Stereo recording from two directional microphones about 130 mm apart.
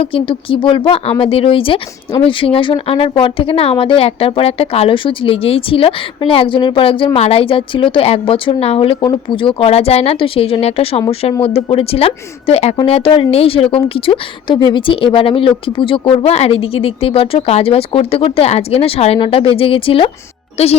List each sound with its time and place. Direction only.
0.0 s speech: 45° left (ahead or behind)